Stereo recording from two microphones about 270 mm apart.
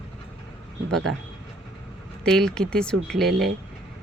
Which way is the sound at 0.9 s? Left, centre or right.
Right.